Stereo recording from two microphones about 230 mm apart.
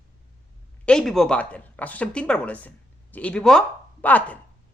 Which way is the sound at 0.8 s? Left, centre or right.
Centre.